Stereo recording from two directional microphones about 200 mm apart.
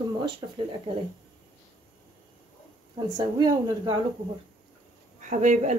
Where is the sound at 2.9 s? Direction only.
20° right (ahead or behind).